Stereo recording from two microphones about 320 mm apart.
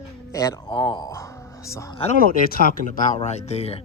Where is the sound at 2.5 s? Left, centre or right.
Left.